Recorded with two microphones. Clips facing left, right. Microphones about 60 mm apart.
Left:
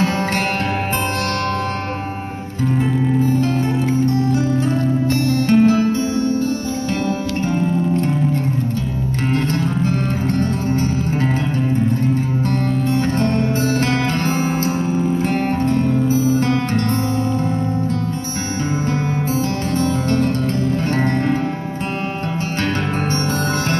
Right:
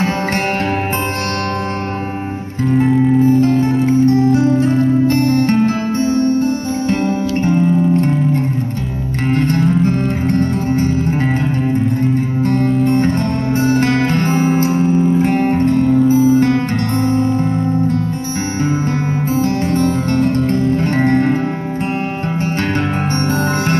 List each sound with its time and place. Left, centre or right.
4.6 s music: right
9.3 s music: right
12.4 s music: right
19.3 s music: right